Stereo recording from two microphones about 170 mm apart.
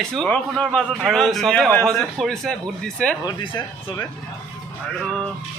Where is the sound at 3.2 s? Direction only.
30° left (ahead or behind).